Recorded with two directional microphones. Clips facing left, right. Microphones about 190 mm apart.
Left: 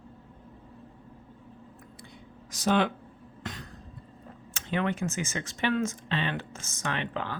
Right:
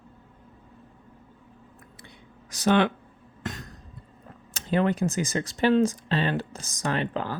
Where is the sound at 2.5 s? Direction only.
70° right (ahead or behind).